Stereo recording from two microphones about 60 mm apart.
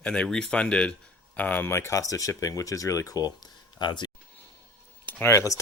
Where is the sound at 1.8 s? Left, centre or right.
Left.